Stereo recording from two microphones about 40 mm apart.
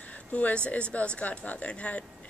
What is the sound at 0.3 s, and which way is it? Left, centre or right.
Speech, left.